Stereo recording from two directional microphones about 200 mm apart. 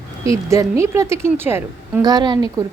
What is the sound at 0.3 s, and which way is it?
A woman's voice, 15° right (ahead or behind).